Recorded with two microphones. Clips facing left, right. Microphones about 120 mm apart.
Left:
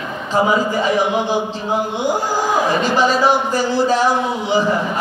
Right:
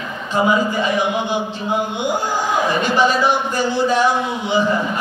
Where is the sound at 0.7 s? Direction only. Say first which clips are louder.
Left 2 dB; 35° left (ahead or behind).